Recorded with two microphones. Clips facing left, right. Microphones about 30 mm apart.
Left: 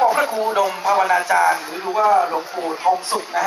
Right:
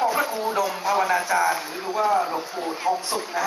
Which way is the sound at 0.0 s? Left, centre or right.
Centre.